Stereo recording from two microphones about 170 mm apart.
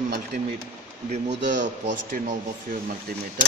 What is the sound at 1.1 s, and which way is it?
Speech, 40° right (ahead or behind).